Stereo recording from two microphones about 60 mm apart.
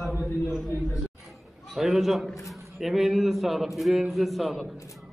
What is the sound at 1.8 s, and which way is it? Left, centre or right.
A man's voice, centre.